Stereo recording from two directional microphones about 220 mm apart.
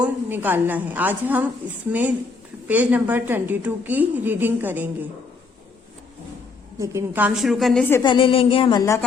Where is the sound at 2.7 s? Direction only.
5° right (ahead or behind).